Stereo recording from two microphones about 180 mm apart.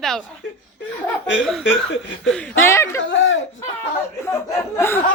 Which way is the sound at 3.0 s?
90° left.